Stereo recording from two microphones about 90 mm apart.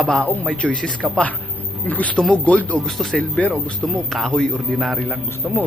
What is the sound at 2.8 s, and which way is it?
Speech, 5° left (ahead or behind).